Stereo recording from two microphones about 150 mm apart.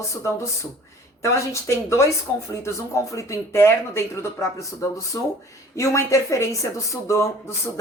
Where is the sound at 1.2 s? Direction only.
20° left (ahead or behind).